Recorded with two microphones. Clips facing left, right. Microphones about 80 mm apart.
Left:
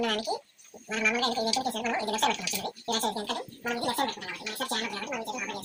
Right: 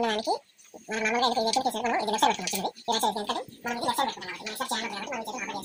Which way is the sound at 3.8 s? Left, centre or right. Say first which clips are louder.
Right 3 dB; centre.